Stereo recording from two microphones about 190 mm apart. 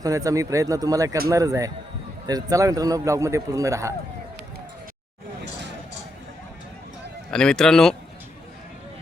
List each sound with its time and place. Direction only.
0.0 s a man's voice: 15° right (ahead or behind)
7.3 s speech: 5° left (ahead or behind)